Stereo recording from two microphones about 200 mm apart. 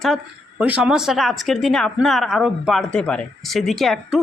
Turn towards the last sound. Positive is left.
turn(degrees=0)  # may be behind; listen again after turning